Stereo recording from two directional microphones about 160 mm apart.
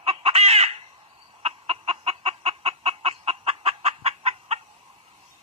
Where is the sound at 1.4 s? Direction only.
40° right (ahead or behind).